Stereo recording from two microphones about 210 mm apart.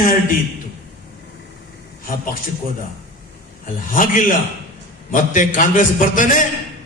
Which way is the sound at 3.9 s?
40° left (ahead or behind).